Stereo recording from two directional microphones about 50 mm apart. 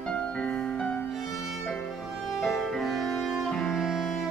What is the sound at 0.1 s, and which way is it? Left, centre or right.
Music, left.